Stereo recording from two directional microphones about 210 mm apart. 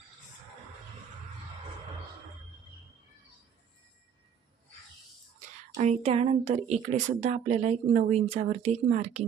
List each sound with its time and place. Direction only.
5.7 s speech: 30° right (ahead or behind)